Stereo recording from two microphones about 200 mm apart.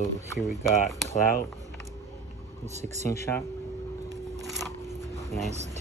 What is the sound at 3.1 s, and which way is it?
Speech, 10° left (ahead or behind).